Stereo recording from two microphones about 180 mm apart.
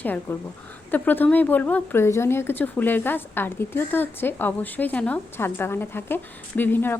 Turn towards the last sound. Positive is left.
turn(degrees=10)  # may be behind; listen again after turning